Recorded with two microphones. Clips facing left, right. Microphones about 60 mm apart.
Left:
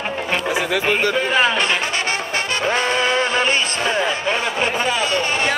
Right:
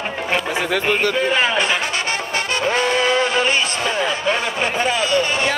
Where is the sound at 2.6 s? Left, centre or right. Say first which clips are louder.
Right 1 dB; left.